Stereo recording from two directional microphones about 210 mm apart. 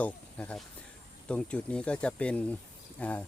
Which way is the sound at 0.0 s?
5° left (ahead or behind).